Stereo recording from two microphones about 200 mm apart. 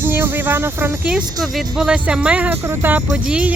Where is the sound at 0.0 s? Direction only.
10° right (ahead or behind).